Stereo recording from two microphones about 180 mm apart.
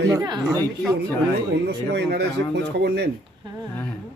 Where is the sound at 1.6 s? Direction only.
65° right (ahead or behind).